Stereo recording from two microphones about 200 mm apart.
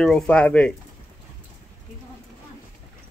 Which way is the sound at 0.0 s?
5° left (ahead or behind).